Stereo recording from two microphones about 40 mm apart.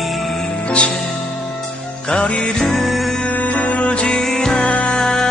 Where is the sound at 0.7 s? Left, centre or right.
Left.